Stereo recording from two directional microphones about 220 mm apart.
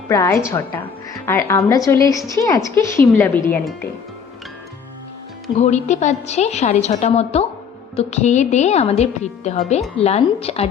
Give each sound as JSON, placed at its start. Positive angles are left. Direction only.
{"t": 0.1, "sound": "a woman's voice", "side_deg": 15}
{"t": 5.5, "sound": "a woman's voice", "side_deg": 30}